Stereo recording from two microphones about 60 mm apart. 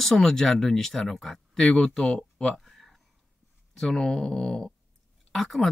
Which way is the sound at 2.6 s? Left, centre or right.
Centre.